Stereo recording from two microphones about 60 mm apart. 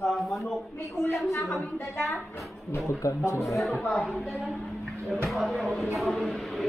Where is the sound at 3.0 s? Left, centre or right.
Left.